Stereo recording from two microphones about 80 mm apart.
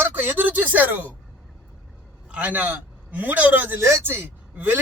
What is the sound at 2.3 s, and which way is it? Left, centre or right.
A man's voice, centre.